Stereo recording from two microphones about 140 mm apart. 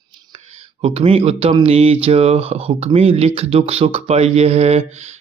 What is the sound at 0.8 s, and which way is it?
Speech, 45° right (ahead or behind).